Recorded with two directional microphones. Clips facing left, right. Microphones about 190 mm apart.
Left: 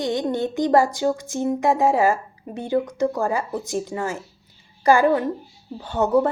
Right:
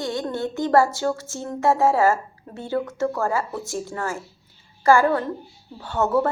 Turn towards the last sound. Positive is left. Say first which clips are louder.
# left 2 dB
turn(degrees=20)  # may be behind; listen again after turning